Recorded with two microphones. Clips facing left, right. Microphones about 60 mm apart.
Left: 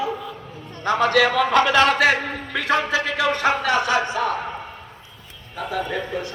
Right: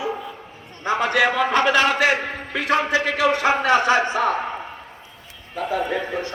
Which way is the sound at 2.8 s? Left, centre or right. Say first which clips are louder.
Right 2 dB; centre.